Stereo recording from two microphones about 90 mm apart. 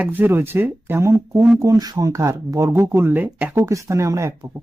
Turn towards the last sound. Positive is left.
turn(degrees=-35)  # may be behind; listen again after turning